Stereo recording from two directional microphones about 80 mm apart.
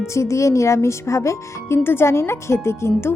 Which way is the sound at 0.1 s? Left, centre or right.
Left.